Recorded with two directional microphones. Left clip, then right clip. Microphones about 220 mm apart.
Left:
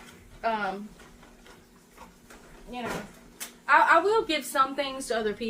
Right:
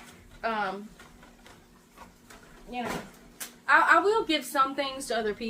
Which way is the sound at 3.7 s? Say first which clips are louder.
Left 1 dB; 10° right (ahead or behind).